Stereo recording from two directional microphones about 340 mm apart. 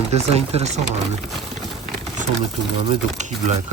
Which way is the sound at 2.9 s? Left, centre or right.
Centre.